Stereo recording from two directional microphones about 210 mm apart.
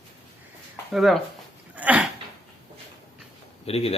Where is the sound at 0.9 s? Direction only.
Centre (ahead or behind).